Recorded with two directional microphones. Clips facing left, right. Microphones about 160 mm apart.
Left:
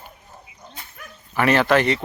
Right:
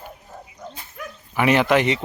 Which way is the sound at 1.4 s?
15° right (ahead or behind).